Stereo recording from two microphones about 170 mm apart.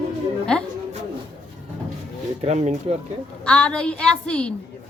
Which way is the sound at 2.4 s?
40° right (ahead or behind).